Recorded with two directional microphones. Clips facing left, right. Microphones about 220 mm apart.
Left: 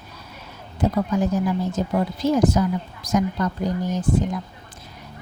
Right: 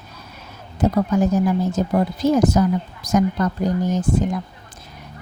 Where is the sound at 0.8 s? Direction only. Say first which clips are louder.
Right 3 dB; 45° right (ahead or behind).